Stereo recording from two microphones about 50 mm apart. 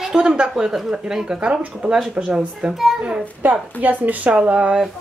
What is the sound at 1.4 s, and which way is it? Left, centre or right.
Speech, right.